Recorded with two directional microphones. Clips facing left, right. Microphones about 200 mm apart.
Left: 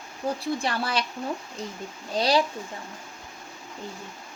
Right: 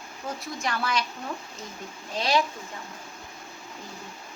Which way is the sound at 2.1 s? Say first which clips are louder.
Left 3 dB; 35° left (ahead or behind).